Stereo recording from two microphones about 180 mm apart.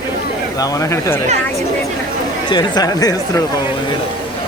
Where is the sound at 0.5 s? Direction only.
20° left (ahead or behind).